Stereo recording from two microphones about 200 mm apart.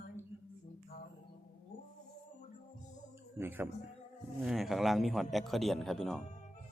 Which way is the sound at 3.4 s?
10° right (ahead or behind).